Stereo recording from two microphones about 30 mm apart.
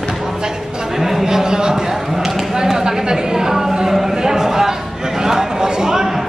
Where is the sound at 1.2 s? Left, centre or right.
Right.